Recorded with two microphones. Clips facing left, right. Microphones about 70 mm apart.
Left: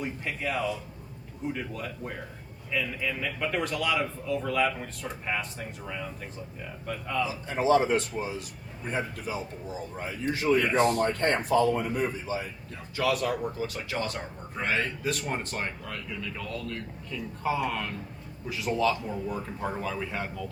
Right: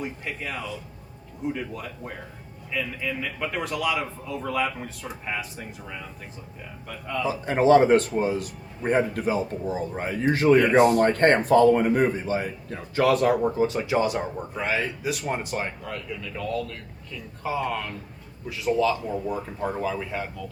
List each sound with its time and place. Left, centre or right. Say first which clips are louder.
0.0 s speech: even; centre
7.3 s a man's voice: right 7 dB; right
13.7 s speech: right 9 dB; right; by 20.3 s centre